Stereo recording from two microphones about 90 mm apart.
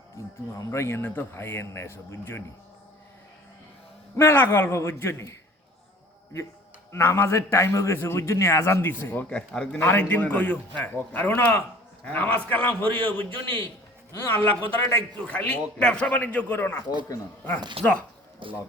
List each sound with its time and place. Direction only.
0.5 s a man's voice: 35° left (ahead or behind)
4.2 s a man's voice: 25° left (ahead or behind)
6.9 s a man's voice: 30° left (ahead or behind)
9.5 s a man's voice: 10° left (ahead or behind)
9.8 s a man's voice: 25° left (ahead or behind)
17.8 s speech: 90° right
18.4 s speech: 65° right (ahead or behind)